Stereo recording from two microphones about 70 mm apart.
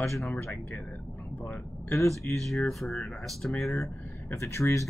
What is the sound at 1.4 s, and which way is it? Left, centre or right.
Speech, left.